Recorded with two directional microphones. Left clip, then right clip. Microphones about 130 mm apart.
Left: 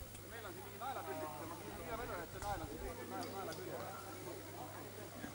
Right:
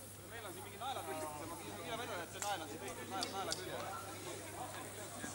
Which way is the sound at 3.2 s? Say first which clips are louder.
Right 6 dB; 30° right (ahead or behind).